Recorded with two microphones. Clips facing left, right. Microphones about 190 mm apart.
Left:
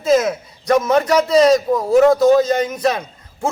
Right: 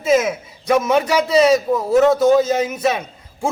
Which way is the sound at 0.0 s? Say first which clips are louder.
Left 1 dB; 10° right (ahead or behind).